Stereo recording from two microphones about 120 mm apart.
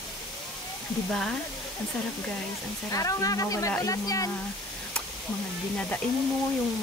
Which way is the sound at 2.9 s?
30° left (ahead or behind).